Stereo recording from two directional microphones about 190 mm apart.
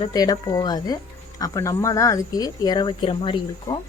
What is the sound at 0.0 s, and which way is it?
A woman's voice, 20° left (ahead or behind).